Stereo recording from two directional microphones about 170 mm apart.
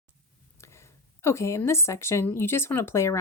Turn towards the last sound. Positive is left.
turn(degrees=15)  # may be behind; listen again after turning